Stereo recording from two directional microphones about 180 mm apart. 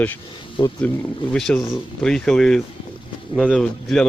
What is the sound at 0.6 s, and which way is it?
Speech, 25° left (ahead or behind).